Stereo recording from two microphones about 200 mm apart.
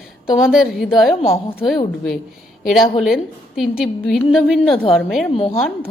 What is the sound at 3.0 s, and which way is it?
A woman's voice, centre (ahead or behind).